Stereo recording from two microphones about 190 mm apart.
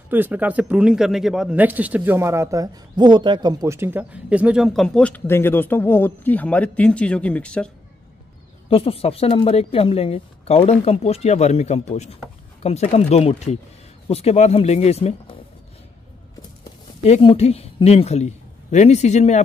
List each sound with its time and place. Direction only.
0.1 s speech: 10° right (ahead or behind)
8.6 s a woman's voice: 30° left (ahead or behind)
17.0 s a woman's voice: 30° left (ahead or behind)